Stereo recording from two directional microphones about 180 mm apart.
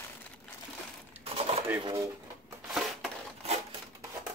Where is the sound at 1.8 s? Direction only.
20° right (ahead or behind).